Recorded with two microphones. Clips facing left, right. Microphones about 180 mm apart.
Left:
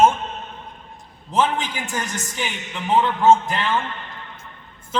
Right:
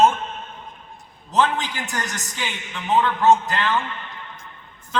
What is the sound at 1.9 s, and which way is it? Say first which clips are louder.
A man's voice: left 2 dB; 10° left (ahead or behind).